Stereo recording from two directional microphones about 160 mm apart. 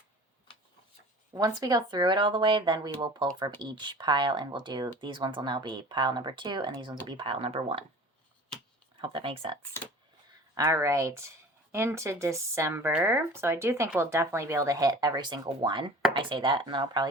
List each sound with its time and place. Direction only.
1.3 s speech: 20° right (ahead or behind)
9.0 s speech: 35° right (ahead or behind)
10.5 s speech: 20° right (ahead or behind)